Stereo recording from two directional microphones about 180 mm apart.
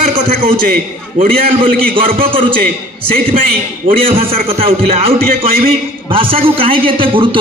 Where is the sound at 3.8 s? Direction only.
50° right (ahead or behind).